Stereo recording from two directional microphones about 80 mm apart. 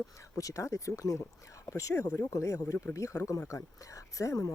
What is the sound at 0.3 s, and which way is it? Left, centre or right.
Speech, left.